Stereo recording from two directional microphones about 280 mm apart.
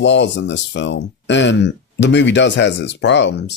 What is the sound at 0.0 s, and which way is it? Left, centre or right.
Speech, left.